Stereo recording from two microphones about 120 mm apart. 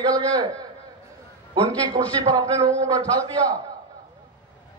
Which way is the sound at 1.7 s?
30° right (ahead or behind).